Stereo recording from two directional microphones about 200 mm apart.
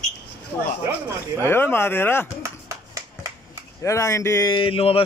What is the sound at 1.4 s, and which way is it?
Speech, 10° left (ahead or behind).